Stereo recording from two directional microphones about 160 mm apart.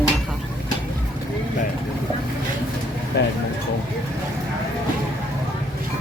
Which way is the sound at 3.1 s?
90° left.